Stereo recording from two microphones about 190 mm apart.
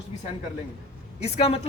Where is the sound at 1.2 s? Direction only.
30° left (ahead or behind).